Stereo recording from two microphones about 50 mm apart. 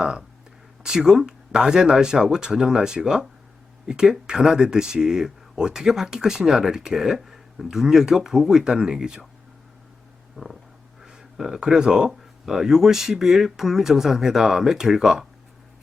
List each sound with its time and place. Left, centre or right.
0.0 s speech: centre
10.3 s a sound: centre
11.0 s speech: centre